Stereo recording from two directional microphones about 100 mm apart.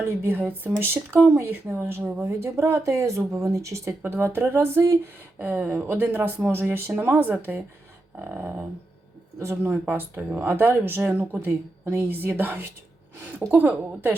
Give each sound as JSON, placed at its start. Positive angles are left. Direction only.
{"t": 0.0, "sound": "a woman's voice", "side_deg": -20}